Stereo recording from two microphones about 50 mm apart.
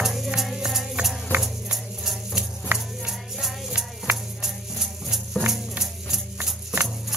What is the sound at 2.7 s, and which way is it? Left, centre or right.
Music, right.